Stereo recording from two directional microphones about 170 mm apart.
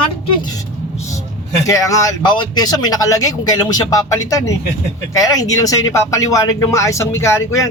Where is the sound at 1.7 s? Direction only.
20° left (ahead or behind).